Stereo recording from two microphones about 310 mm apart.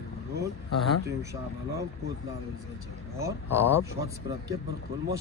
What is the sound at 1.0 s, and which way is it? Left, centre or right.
Speech, centre.